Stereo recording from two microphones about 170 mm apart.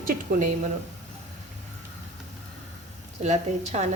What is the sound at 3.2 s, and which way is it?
Speech, 40° right (ahead or behind).